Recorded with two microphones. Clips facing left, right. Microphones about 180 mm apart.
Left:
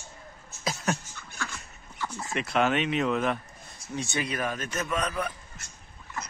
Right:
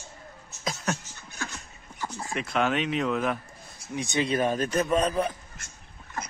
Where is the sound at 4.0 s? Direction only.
20° right (ahead or behind).